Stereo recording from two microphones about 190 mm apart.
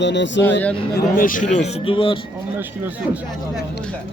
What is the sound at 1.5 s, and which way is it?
Speech, 30° left (ahead or behind).